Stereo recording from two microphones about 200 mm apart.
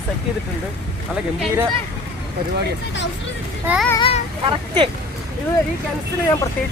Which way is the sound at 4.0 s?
30° left (ahead or behind).